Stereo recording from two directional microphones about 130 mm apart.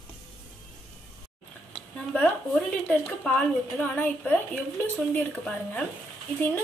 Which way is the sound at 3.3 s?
10° left (ahead or behind).